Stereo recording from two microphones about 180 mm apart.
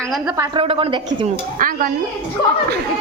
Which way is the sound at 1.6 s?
50° right (ahead or behind).